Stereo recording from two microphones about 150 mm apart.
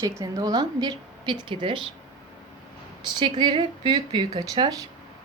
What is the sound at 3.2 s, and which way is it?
Speech, 30° right (ahead or behind).